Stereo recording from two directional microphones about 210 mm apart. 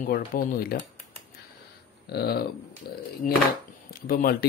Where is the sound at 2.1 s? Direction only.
50° left (ahead or behind).